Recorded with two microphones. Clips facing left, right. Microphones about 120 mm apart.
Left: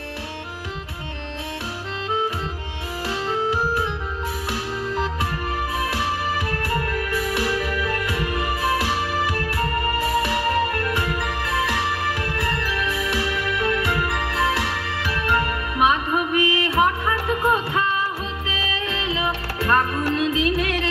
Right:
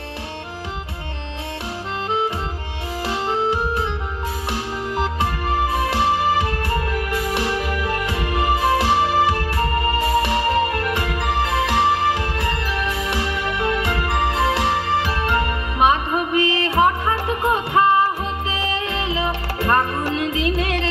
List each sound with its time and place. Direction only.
3.1 s music: 25° right (ahead or behind)
5.2 s music: 25° right (ahead or behind)